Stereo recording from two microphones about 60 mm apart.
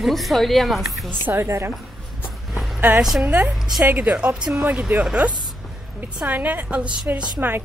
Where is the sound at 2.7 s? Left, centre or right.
Right.